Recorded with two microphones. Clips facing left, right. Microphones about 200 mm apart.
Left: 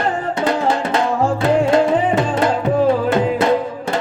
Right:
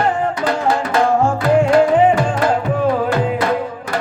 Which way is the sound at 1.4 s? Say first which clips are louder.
Right 2 dB; 25° left (ahead or behind).